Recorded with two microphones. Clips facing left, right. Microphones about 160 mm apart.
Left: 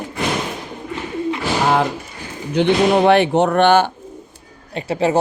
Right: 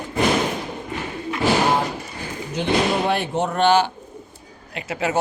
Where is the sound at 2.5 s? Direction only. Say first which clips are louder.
Left 6 dB; 70° left (ahead or behind); by 3.9 s 55° left (ahead or behind).